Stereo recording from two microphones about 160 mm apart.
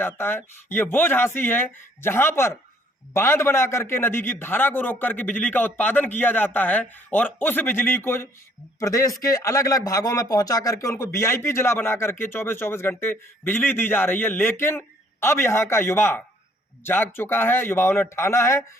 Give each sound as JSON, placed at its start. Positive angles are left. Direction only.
{"t": 0.0, "sound": "a man's voice", "side_deg": 15}